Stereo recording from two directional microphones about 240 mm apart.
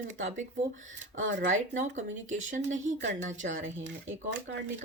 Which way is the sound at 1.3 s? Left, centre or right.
Right.